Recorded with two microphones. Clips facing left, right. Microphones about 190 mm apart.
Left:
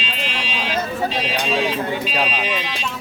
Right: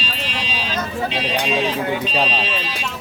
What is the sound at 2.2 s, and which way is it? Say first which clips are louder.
Speech: right 1 dB; 10° left (ahead or behind).